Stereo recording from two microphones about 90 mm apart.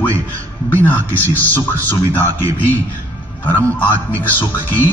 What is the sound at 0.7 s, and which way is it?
A man's voice, 20° left (ahead or behind).